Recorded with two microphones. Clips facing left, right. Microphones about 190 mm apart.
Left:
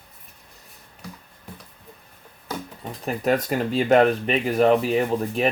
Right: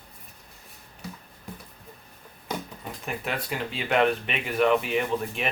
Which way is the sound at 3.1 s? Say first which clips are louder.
Left 10 dB; 40° left (ahead or behind).